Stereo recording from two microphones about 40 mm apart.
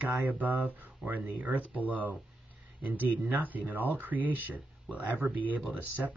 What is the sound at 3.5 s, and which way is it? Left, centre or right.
Speech, right.